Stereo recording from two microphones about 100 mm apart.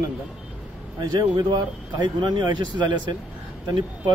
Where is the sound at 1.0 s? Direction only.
45° right (ahead or behind).